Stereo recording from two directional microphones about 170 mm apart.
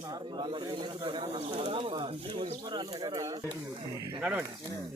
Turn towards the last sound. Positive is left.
turn(degrees=-5)  # may be behind; listen again after turning